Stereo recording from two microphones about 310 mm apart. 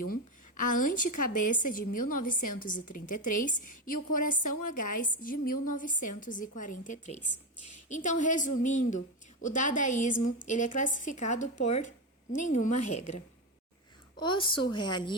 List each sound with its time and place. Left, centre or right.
0.1 s a sound: left
0.9 s a woman's voice: left
2.0 s a woman's voice: left
2.5 s a woman's voice: left